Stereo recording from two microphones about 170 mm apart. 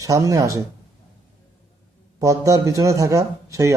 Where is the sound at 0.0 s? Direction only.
20° right (ahead or behind).